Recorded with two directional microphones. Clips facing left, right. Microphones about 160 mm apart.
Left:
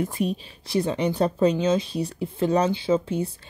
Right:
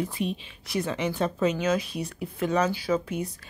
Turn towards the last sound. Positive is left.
turn(degrees=30)  # may be behind; listen again after turning